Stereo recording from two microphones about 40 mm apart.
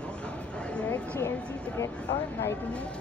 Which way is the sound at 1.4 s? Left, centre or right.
Left.